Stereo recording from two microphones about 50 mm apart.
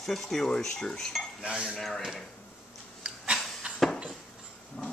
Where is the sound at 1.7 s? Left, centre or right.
Centre.